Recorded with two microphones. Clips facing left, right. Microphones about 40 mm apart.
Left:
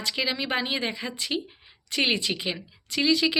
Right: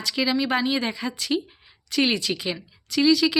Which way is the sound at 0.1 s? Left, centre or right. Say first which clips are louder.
Right 5 dB; left.